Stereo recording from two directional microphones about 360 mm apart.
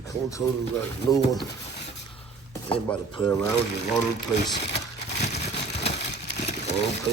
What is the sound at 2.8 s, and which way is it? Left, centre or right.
Speech, centre.